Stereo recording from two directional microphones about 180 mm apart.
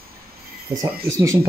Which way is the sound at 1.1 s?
15° right (ahead or behind).